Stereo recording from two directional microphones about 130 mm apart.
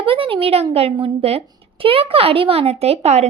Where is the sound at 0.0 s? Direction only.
45° right (ahead or behind).